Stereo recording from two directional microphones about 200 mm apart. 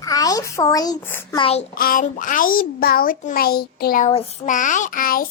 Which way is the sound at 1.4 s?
30° left (ahead or behind).